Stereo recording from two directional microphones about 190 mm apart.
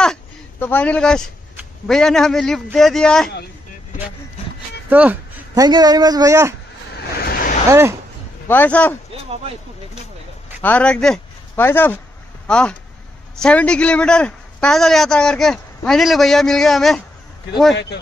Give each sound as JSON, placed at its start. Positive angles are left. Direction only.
{"t": 0.0, "sound": "a sound", "side_deg": 5}
{"t": 1.9, "sound": "a man's voice", "side_deg": 0}
{"t": 4.8, "sound": "speech", "side_deg": -10}
{"t": 5.5, "sound": "a man's voice", "side_deg": -20}
{"t": 7.2, "sound": "a sound", "side_deg": 50}
{"t": 8.5, "sound": "a man's voice", "side_deg": 10}
{"t": 10.6, "sound": "a man's voice", "side_deg": 5}